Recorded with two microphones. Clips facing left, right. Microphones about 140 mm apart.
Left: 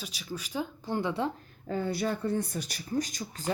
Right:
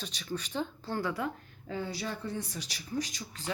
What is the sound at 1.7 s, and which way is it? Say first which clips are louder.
Speech: left 6 dB; 50° left (ahead or behind).